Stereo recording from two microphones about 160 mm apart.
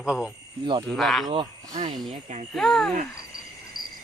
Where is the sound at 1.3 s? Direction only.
30° right (ahead or behind).